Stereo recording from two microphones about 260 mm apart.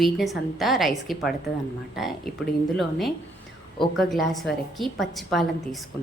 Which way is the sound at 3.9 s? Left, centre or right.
Centre.